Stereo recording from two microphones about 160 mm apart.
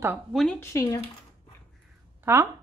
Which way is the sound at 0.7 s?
20° left (ahead or behind).